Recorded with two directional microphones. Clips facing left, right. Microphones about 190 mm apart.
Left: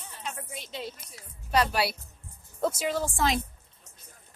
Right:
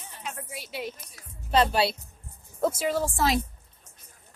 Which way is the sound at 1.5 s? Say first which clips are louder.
Right 3 dB; 25° right (ahead or behind).